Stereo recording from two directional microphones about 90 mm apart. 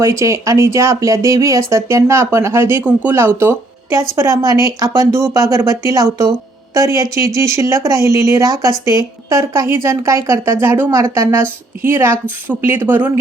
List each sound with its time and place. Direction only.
0.0 s a woman's voice: 35° right (ahead or behind)